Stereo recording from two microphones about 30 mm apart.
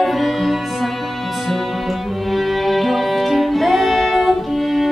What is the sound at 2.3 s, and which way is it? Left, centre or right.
Music, centre.